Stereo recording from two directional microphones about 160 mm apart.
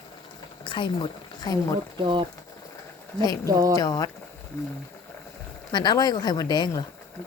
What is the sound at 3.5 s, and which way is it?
Speech, 20° right (ahead or behind).